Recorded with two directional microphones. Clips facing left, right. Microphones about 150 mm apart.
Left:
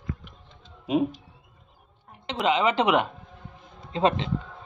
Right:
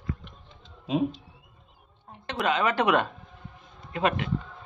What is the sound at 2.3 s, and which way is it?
Speech, 20° left (ahead or behind).